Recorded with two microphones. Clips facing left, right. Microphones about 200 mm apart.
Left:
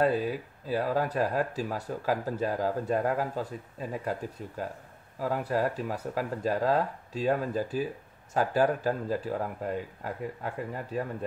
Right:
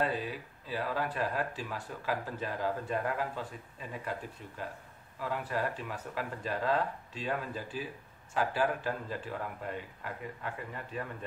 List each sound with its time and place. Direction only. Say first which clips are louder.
0.0 s speech: left 7 dB; 40° left (ahead or behind)